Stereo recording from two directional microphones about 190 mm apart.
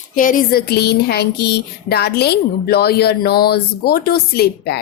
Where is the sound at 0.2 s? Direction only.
45° left (ahead or behind).